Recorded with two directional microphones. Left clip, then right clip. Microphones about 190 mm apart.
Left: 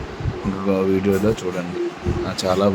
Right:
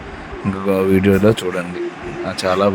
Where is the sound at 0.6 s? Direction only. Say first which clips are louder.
Right 4 dB; 20° right (ahead or behind).